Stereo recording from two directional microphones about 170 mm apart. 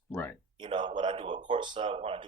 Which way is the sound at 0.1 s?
10° left (ahead or behind).